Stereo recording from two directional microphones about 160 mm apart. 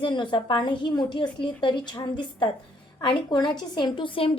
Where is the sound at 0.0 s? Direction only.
30° left (ahead or behind).